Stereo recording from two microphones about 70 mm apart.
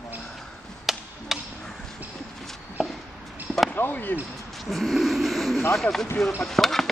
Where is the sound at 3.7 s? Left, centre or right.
Left.